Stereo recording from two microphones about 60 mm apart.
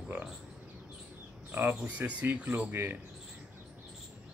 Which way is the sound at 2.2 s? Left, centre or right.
Right.